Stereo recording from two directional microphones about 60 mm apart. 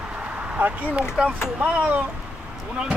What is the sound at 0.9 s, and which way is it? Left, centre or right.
Speech, centre.